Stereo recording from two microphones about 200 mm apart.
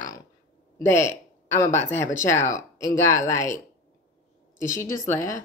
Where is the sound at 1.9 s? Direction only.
15° left (ahead or behind).